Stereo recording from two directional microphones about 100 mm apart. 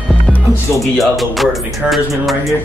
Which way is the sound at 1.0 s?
Centre (ahead or behind).